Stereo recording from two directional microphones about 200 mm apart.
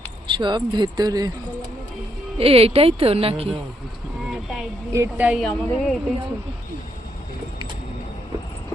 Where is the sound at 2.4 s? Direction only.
30° right (ahead or behind).